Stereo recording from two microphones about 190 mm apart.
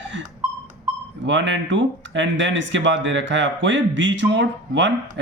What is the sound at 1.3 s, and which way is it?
Speech, 75° right (ahead or behind).